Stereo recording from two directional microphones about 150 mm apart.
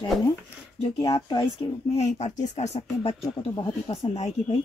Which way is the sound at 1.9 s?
50° left (ahead or behind).